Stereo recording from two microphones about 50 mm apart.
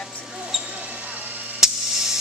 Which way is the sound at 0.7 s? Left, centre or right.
Right.